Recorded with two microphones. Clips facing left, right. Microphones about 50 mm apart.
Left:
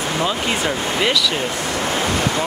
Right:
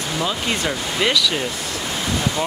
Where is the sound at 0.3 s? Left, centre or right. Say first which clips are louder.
Left 2 dB; centre.